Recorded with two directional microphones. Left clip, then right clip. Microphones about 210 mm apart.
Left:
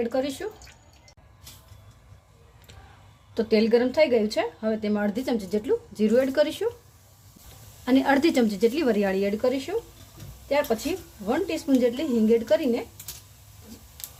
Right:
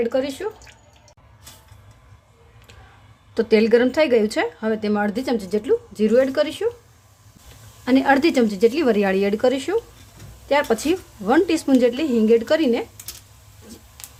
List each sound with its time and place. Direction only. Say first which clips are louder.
0.0 s speech: right 5 dB; 10° right (ahead or behind)
3.3 s speech: right 5 dB; 10° right (ahead or behind)
7.9 s speech: right 4 dB; 5° right (ahead or behind)